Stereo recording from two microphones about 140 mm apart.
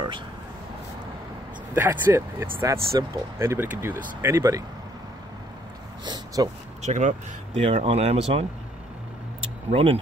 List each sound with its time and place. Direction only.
1.8 s speech: 15° right (ahead or behind)
6.0 s a sound: 30° right (ahead or behind)
6.8 s speech: 60° right (ahead or behind)
9.7 s speech: 40° right (ahead or behind)